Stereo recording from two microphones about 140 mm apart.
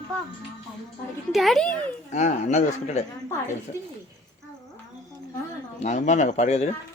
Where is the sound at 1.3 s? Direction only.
Centre (ahead or behind).